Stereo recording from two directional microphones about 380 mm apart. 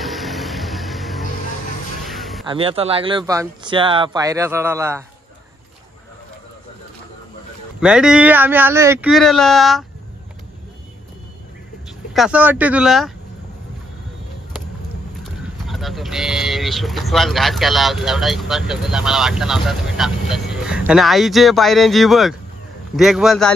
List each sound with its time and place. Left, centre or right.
0.0 s music: centre
2.0 s a sound: centre
2.4 s speech: centre
7.8 s speech: centre
12.1 s speech: centre
15.4 s speech: centre